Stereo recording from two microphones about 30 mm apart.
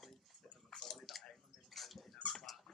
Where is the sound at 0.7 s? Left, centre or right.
Left.